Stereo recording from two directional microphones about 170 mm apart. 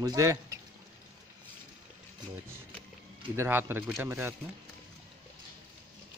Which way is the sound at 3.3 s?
15° right (ahead or behind).